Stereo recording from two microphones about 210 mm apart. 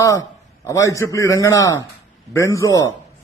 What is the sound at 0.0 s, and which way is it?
Speech, 15° left (ahead or behind).